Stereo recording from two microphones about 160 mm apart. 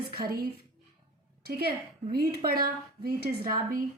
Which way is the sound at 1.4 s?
75° right (ahead or behind).